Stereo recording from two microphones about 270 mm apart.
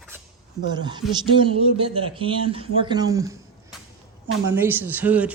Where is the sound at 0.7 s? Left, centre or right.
Centre.